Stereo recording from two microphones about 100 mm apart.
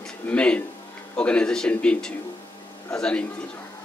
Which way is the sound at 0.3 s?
10° left (ahead or behind).